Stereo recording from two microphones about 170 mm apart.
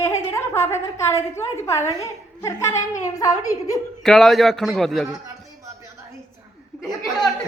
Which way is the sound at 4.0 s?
Centre (ahead or behind).